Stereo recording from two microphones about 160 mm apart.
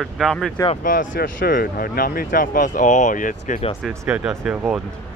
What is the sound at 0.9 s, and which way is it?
Speech, 60° left (ahead or behind).